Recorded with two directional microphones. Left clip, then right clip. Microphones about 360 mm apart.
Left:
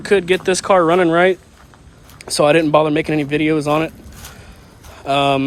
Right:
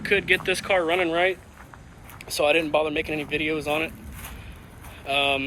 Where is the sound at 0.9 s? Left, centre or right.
Left.